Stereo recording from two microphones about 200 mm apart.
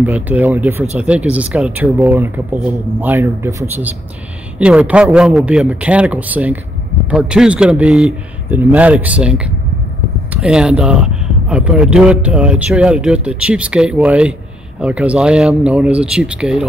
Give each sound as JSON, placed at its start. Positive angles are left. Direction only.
{"t": 0.0, "sound": "speech", "side_deg": -10}